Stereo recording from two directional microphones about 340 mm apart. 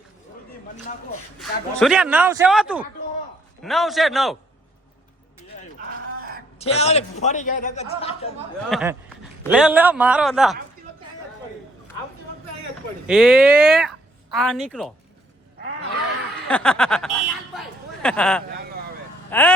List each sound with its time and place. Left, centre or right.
1.4 s speech: centre
6.6 s a man's voice: centre
8.7 s speech: centre
13.1 s speech: centre
16.5 s speech: centre
17.5 s a sound: centre
19.3 s speech: centre